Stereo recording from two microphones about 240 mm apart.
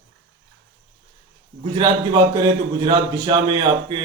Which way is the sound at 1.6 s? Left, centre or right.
Centre.